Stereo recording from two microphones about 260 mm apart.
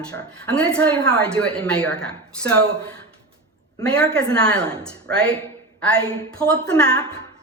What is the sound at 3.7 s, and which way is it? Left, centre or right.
A woman's voice, centre.